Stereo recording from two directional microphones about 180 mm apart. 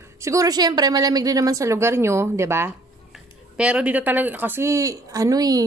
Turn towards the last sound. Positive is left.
turn(degrees=-20)  # may be behind; listen again after turning